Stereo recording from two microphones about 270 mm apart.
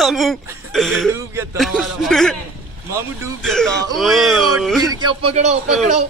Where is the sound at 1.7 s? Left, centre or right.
Centre.